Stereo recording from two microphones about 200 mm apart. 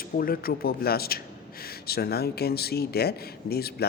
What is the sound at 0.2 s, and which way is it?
A man's voice, 50° left (ahead or behind).